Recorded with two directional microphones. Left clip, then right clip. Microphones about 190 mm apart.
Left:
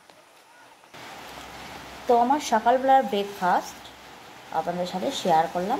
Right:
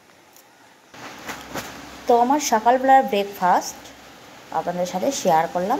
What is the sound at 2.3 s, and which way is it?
A woman's voice, 10° right (ahead or behind).